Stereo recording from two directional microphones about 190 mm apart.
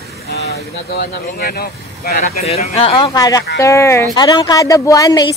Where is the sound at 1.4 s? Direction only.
55° left (ahead or behind).